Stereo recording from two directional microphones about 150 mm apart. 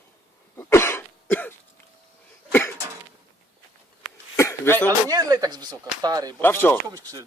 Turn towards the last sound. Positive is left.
turn(degrees=-25)  # may be behind; listen again after turning